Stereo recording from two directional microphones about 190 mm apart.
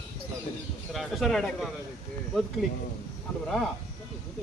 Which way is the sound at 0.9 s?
Centre (ahead or behind).